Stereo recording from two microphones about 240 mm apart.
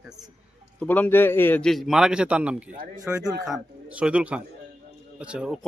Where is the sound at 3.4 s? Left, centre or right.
Centre.